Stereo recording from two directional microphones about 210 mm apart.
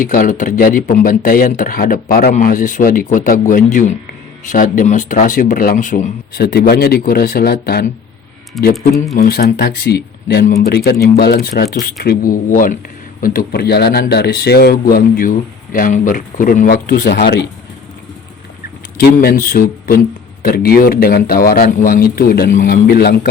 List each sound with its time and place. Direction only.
0.0 s speech: 40° left (ahead or behind)
8.5 s speech: centre (ahead or behind)
9.1 s speech: 45° left (ahead or behind)
18.9 s speech: 45° left (ahead or behind)